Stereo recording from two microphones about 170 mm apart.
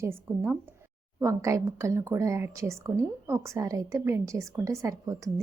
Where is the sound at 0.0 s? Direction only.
15° right (ahead or behind).